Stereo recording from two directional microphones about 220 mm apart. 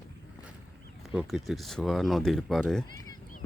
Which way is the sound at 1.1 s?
Centre (ahead or behind).